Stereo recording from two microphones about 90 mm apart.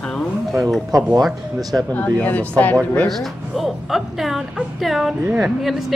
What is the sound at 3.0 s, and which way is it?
A woman's voice, centre (ahead or behind).